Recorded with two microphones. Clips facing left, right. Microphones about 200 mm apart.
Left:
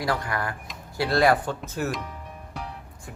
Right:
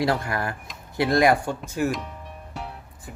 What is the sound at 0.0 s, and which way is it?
Speech, 25° right (ahead or behind).